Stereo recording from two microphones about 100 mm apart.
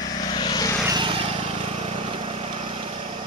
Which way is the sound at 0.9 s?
55° right (ahead or behind).